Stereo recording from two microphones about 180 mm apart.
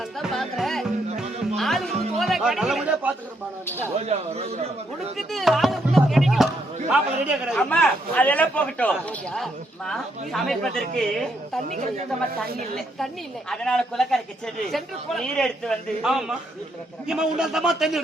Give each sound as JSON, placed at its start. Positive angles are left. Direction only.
{"t": 0.2, "sound": "music", "side_deg": 0}
{"t": 3.9, "sound": "a man's voice", "side_deg": -35}
{"t": 5.1, "sound": "a man's voice", "side_deg": 0}
{"t": 13.5, "sound": "a man's voice", "side_deg": 5}